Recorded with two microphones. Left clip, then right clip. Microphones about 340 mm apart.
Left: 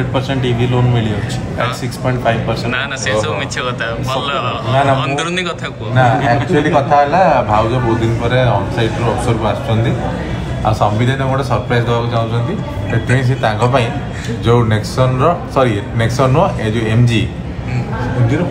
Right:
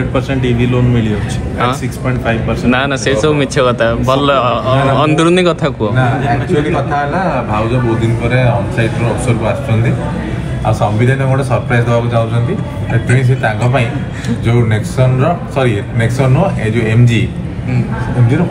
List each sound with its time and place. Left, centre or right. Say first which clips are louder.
0.1 s speech: right 2 dB; centre
2.7 s speech: right 5 dB; centre
5.9 s a man's voice: left 2 dB; left
11.7 s speech: right 3 dB; centre
14.4 s speech: left 3 dB; centre